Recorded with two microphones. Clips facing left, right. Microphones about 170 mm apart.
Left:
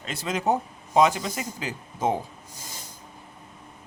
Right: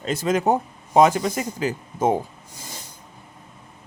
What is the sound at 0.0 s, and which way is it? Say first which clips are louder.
Speech: right 6 dB; 45° right (ahead or behind).